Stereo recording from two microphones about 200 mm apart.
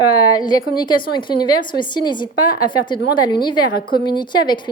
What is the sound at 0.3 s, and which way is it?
A woman's voice, 20° left (ahead or behind).